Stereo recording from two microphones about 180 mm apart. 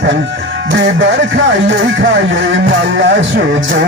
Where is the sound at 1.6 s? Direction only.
90° right.